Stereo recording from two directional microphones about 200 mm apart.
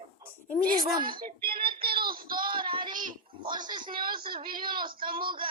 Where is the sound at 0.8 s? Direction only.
20° right (ahead or behind).